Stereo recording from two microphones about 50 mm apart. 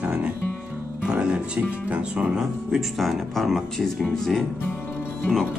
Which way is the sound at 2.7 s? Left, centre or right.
Centre.